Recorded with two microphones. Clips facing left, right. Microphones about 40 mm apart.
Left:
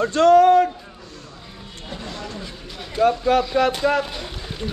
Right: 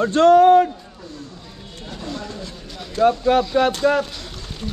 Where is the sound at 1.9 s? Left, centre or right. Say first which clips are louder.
Right 2 dB; centre.